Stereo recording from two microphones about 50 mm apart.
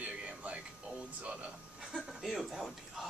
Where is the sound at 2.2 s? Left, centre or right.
Centre.